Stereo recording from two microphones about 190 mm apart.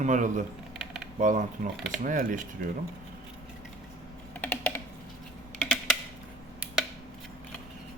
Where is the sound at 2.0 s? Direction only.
45° right (ahead or behind).